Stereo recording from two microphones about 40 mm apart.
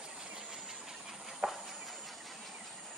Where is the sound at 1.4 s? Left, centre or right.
Right.